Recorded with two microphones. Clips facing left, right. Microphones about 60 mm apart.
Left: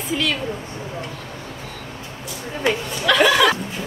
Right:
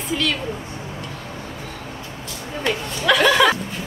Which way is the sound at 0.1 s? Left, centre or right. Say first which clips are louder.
Even; centre.